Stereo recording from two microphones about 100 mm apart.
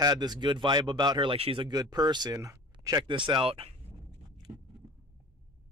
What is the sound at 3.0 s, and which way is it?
Speech, 55° right (ahead or behind).